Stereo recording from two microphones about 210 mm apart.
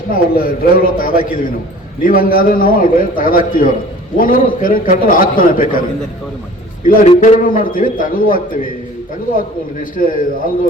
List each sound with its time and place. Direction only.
0.1 s a man's voice: 45° left (ahead or behind)
6.8 s a man's voice: 35° left (ahead or behind)
10.0 s a man's voice: 40° left (ahead or behind)